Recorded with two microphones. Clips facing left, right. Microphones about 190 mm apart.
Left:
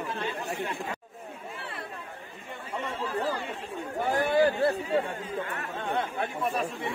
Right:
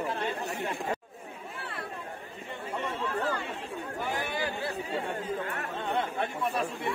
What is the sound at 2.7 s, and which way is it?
Chatter, 10° left (ahead or behind).